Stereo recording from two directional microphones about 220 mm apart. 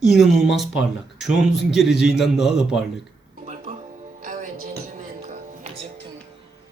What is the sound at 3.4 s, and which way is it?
Music, 30° right (ahead or behind).